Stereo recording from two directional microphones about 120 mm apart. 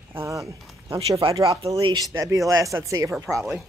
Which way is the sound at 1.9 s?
30° right (ahead or behind).